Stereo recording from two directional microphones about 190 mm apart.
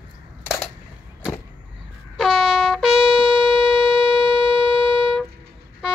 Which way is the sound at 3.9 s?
25° right (ahead or behind).